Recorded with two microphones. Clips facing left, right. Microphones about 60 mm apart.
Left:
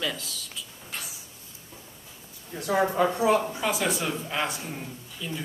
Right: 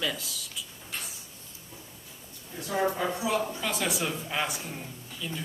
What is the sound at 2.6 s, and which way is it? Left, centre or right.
Speech, left.